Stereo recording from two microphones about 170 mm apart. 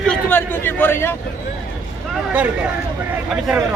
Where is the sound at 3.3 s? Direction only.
5° right (ahead or behind).